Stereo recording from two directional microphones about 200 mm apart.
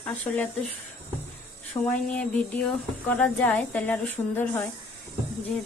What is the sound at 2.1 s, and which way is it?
Speech, 5° left (ahead or behind).